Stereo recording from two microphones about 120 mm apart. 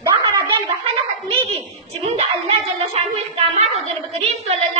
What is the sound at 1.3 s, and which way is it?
Dog, 55° right (ahead or behind).